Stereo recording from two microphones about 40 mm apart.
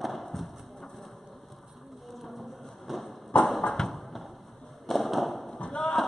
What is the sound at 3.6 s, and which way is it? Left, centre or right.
Clip-clop, centre.